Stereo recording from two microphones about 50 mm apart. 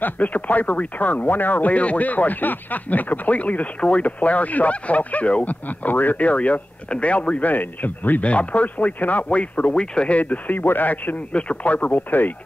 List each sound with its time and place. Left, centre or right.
0.0 s speech: left
11.3 s speech: left